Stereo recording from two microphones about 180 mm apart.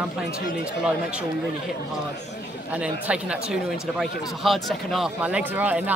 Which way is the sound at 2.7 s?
5° right (ahead or behind).